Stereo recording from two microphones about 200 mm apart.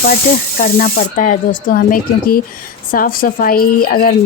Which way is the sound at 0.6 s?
45° left (ahead or behind).